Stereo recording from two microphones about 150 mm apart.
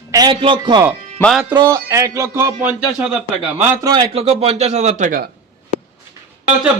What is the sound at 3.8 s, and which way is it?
A man's voice, 30° right (ahead or behind).